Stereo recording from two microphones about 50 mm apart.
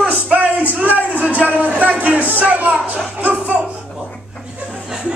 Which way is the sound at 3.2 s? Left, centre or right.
Right.